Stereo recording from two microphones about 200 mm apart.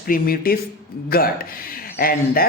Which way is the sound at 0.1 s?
45° left (ahead or behind).